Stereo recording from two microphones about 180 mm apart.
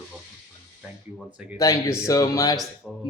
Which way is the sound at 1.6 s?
15° left (ahead or behind).